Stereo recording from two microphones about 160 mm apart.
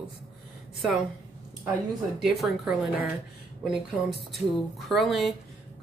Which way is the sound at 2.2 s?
5° right (ahead or behind).